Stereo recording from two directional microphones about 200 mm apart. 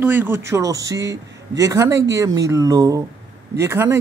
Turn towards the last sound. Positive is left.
turn(degrees=-10)  # may be behind; listen again after turning